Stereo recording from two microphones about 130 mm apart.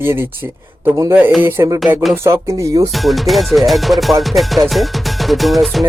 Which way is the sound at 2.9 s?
Centre (ahead or behind).